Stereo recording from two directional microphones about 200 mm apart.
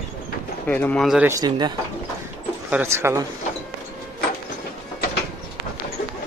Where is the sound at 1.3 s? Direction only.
20° right (ahead or behind).